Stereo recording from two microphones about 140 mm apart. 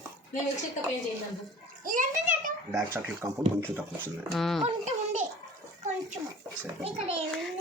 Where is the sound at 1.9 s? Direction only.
75° right (ahead or behind).